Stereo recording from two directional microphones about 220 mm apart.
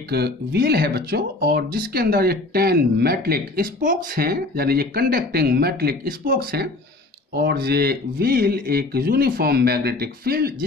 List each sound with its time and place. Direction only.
0.1 s speech: 45° right (ahead or behind)